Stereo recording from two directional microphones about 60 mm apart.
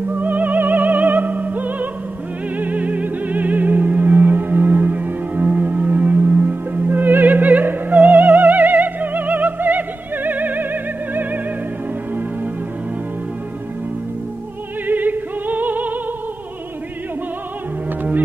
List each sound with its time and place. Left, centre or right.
0.1 s opera: right
2.5 s music: right
14.9 s music: right